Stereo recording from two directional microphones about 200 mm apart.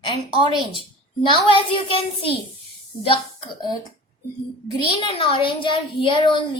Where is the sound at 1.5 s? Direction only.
25° left (ahead or behind).